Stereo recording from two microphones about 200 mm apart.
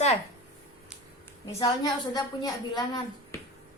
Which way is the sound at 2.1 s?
20° left (ahead or behind).